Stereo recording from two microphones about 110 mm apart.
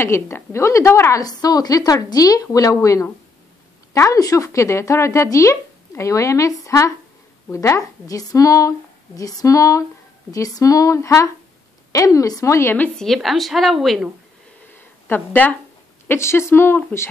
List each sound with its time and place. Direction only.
0.0 s a woman's voice: 25° left (ahead or behind)
12.9 s a woman's voice: 5° left (ahead or behind)
15.0 s speech: 15° left (ahead or behind)